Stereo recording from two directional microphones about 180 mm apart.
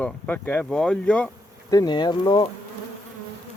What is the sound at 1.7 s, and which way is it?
Speech, 20° left (ahead or behind).